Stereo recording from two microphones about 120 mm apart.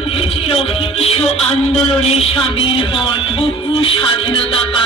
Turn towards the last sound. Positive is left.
turn(degrees=50)  # may be behind; listen again after turning